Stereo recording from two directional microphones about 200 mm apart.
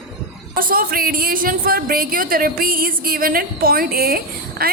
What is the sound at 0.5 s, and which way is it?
A woman's voice, 45° right (ahead or behind).